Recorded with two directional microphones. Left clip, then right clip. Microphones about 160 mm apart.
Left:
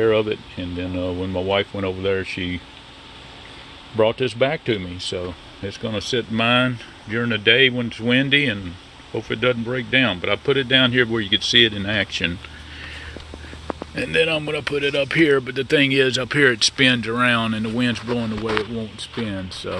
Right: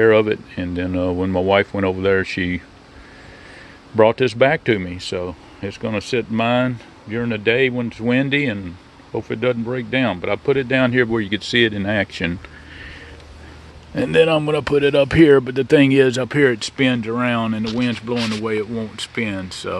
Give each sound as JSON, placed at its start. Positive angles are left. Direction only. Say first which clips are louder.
{"t": 0.0, "sound": "speech", "louder": "right 5 dB", "side_deg": -40}
{"t": 3.9, "sound": "speech", "louder": "right 5 dB", "side_deg": -40}
{"t": 13.9, "sound": "speech", "louder": "right 5 dB", "side_deg": -45}